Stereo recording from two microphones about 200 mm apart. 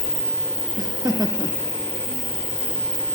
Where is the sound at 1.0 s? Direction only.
20° right (ahead or behind).